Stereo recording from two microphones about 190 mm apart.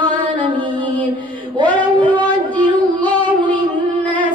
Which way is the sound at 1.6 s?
25° right (ahead or behind).